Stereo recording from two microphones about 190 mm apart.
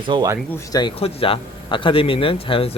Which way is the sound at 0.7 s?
25° left (ahead or behind).